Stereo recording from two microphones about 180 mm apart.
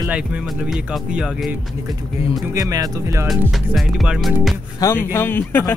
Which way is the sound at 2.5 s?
20° right (ahead or behind).